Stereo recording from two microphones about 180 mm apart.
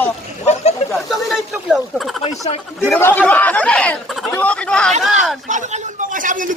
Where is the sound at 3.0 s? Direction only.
10° left (ahead or behind).